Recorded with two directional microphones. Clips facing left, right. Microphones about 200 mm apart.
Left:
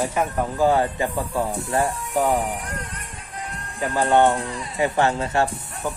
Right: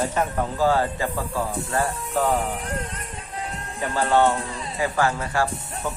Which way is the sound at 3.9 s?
20° left (ahead or behind).